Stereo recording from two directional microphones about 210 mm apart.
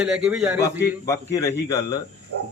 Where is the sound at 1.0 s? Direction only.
15° left (ahead or behind).